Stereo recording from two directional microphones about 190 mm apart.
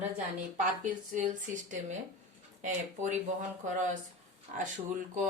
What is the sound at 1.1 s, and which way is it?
Speech, 40° right (ahead or behind).